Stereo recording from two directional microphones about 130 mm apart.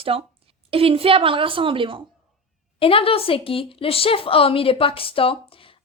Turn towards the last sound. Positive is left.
turn(degrees=45)  # may be behind; listen again after turning